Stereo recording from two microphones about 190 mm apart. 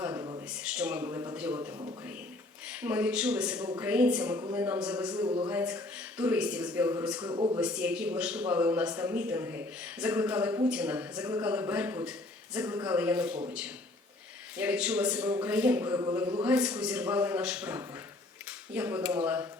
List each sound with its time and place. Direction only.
0.0 s a sound: 20° right (ahead or behind)
0.5 s a sound: 5° right (ahead or behind)
2.6 s a man's voice: 10° right (ahead or behind)
5.1 s speech: 25° right (ahead or behind)
5.5 s a man's voice: 10° right (ahead or behind)
7.2 s speech: 25° right (ahead or behind)
7.6 s a man's voice: 5° right (ahead or behind)
14.5 s a man's voice: 5° right (ahead or behind)